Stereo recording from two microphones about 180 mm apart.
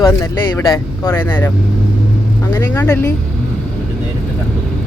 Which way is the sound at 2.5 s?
15° left (ahead or behind).